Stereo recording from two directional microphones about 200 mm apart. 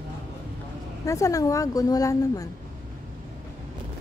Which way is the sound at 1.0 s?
15° left (ahead or behind).